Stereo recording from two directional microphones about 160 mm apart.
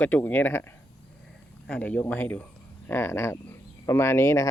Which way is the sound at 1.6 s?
5° left (ahead or behind).